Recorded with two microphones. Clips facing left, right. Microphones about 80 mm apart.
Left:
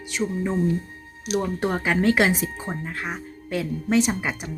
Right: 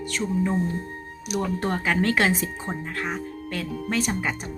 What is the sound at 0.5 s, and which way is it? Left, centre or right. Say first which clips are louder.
Speech: left 3 dB; right.